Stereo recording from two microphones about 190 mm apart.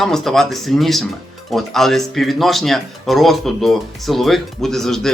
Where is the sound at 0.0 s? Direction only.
Centre (ahead or behind).